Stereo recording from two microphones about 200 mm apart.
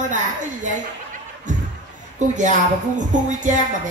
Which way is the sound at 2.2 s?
35° right (ahead or behind).